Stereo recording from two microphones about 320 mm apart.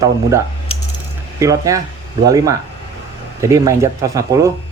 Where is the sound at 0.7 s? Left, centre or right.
Centre.